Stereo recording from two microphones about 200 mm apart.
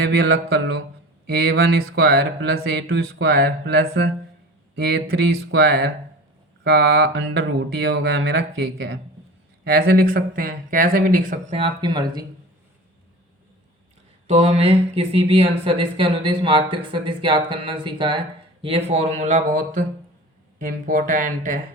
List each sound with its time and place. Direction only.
1.3 s speech: 55° right (ahead or behind)
11.5 s speech: 25° right (ahead or behind)
14.3 s speech: 30° right (ahead or behind)